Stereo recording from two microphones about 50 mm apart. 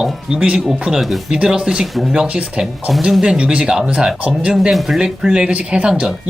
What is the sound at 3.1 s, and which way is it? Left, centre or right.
Speech, centre.